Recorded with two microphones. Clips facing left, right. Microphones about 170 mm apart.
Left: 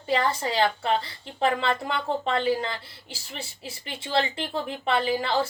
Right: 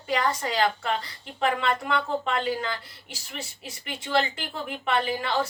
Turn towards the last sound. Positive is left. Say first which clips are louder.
# left 2 dB
turn(degrees=30)  # may be behind; listen again after turning